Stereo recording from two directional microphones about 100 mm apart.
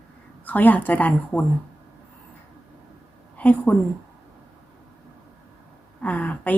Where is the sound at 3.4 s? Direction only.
15° left (ahead or behind).